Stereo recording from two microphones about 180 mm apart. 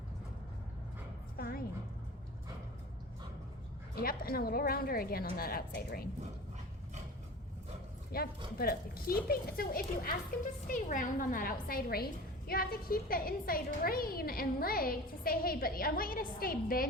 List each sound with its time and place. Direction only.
1.4 s a sound: 55° left (ahead or behind)
3.9 s a woman's voice: 55° left (ahead or behind)
8.1 s a woman's voice: 55° left (ahead or behind)